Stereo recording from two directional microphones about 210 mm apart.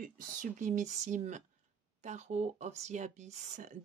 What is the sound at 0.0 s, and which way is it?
Speech, 40° right (ahead or behind).